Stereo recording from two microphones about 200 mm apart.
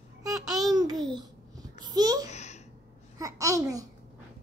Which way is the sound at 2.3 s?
35° left (ahead or behind).